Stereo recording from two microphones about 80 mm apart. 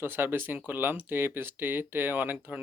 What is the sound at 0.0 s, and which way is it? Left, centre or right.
Speech, right.